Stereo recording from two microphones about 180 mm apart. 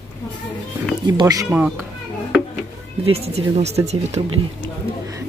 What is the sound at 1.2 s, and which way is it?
Speech, 20° right (ahead or behind).